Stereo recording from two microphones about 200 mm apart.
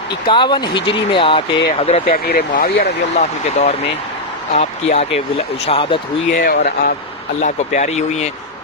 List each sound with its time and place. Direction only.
0.3 s speech: 25° left (ahead or behind)
2.0 s speech: 50° left (ahead or behind)
3.2 s speech: 35° left (ahead or behind)
6.3 s speech: 45° left (ahead or behind)